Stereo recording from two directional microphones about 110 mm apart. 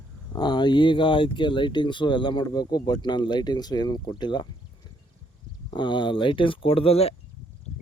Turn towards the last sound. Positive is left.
turn(degrees=65)  # may be behind; listen again after turning